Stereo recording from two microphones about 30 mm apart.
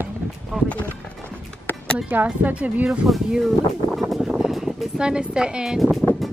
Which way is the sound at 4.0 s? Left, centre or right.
Centre.